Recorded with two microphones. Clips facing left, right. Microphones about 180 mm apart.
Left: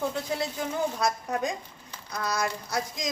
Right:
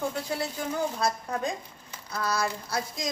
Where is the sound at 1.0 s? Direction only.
20° left (ahead or behind).